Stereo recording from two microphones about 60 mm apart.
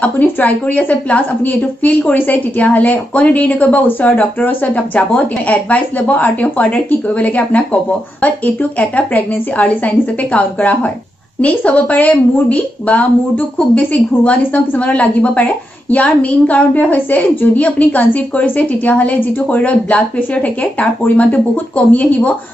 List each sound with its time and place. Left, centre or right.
0.0 s a woman's voice: left
8.7 s a woman's voice: left